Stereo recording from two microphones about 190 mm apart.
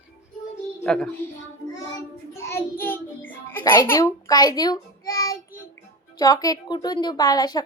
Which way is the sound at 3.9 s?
15° left (ahead or behind).